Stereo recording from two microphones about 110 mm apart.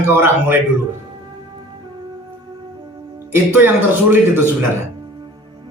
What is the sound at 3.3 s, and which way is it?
A man's voice, 20° right (ahead or behind).